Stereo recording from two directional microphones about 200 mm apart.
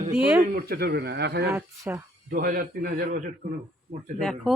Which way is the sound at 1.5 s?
10° right (ahead or behind).